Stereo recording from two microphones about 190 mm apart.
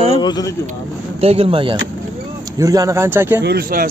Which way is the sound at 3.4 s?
55° right (ahead or behind).